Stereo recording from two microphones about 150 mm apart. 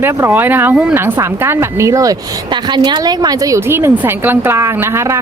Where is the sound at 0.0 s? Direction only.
15° right (ahead or behind).